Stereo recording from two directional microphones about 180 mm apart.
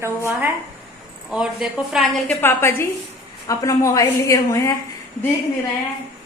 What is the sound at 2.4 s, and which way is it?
A woman's voice, 10° left (ahead or behind).